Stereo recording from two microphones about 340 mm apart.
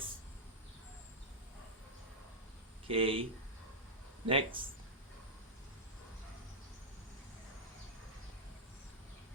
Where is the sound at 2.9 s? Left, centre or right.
Centre.